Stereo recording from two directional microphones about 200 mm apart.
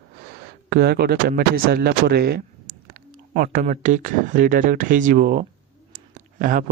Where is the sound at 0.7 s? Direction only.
50° right (ahead or behind).